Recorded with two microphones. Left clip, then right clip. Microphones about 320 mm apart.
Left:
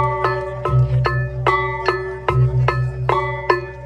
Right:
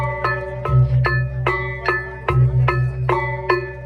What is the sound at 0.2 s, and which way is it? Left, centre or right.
Music, left.